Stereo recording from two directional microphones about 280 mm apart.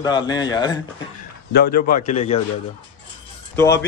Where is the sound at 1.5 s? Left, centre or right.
Left.